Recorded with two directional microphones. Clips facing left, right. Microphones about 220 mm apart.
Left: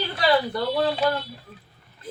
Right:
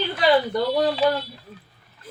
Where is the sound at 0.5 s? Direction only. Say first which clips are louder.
Right 2 dB; 15° right (ahead or behind).